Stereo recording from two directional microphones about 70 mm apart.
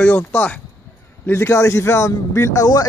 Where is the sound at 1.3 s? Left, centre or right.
Left.